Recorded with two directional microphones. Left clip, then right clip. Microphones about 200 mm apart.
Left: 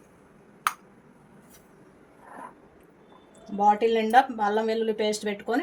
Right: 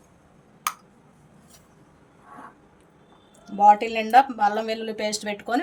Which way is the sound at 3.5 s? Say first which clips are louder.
Right 4 dB; 35° right (ahead or behind).